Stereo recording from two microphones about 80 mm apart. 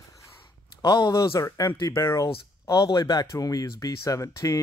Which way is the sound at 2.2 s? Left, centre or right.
Left.